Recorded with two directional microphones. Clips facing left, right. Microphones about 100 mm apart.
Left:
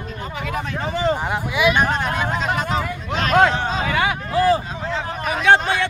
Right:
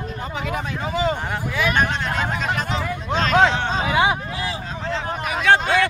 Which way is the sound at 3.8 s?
20° right (ahead or behind).